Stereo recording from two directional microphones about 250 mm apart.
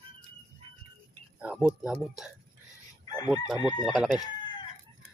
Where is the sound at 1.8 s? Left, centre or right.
Centre.